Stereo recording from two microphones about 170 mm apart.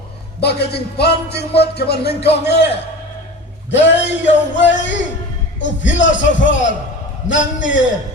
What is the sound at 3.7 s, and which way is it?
Music, 90° left.